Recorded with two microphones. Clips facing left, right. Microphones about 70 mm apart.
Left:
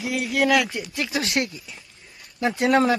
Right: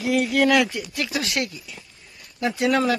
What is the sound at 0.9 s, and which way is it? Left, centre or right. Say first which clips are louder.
Speech: left 1 dB; left.